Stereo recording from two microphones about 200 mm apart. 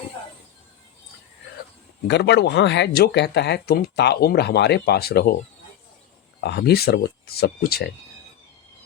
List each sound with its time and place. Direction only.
2.0 s speech: 60° left (ahead or behind)
6.4 s speech: 55° left (ahead or behind)